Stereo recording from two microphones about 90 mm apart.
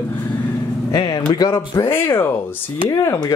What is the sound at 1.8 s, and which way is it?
Speech, 25° left (ahead or behind).